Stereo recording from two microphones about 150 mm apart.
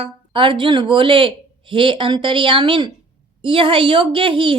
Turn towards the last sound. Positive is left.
turn(degrees=-35)  # may be behind; listen again after turning